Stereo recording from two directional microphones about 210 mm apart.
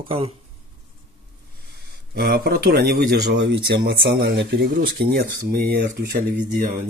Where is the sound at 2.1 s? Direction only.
45° right (ahead or behind).